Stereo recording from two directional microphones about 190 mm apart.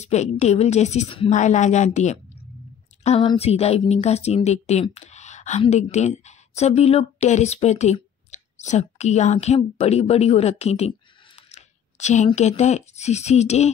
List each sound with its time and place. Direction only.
0.0 s a woman's voice: 35° left (ahead or behind)
11.5 s a sound: 40° left (ahead or behind)
12.4 s a woman's voice: 35° left (ahead or behind)